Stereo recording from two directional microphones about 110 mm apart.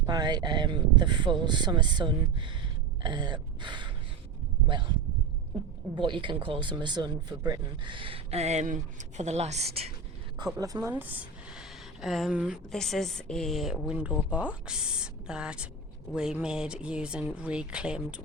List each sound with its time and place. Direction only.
0.0 s speech: 40° right (ahead or behind)
6.0 s speech: 45° right (ahead or behind); by 9.9 s 70° right (ahead or behind)
10.3 s speech: 35° right (ahead or behind)
11.0 s a sound: 15° right (ahead or behind)
12.7 s a woman's voice: 5° left (ahead or behind)
13.8 s speech: 10° right (ahead or behind)